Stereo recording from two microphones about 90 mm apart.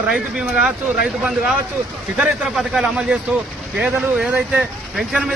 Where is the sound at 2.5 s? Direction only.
5° right (ahead or behind).